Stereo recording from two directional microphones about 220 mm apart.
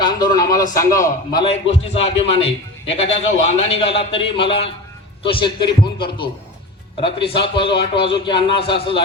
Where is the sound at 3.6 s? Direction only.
25° left (ahead or behind).